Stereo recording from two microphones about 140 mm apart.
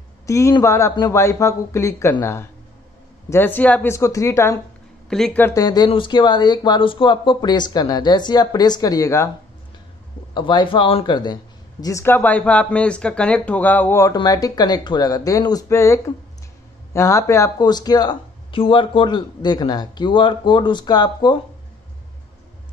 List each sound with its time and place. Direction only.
0.3 s speech: 20° left (ahead or behind)
5.1 s speech: centre (ahead or behind)
5.4 s speech: 25° left (ahead or behind)
10.3 s speech: 35° left (ahead or behind)
11.8 s speech: 20° left (ahead or behind)
14.1 s speech: 25° left (ahead or behind)